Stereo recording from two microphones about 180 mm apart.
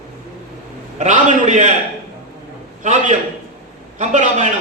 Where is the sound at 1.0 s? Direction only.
45° right (ahead or behind).